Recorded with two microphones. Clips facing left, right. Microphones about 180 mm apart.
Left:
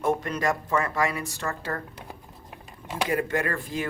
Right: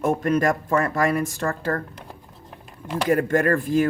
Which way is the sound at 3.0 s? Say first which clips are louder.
Right 7 dB; 45° right (ahead or behind).